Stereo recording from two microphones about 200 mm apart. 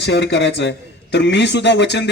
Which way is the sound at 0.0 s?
60° left (ahead or behind).